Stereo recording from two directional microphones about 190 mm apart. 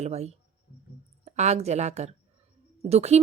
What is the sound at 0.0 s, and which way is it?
Speech, 35° right (ahead or behind).